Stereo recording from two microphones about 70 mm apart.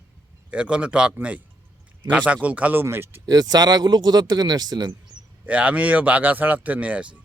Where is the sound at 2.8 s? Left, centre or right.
Right.